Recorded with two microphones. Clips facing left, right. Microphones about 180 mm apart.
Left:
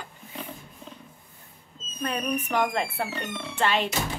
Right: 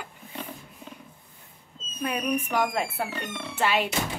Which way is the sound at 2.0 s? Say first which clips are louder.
Right 1 dB; 10° right (ahead or behind).